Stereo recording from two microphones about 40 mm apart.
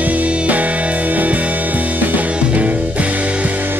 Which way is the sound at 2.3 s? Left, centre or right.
Right.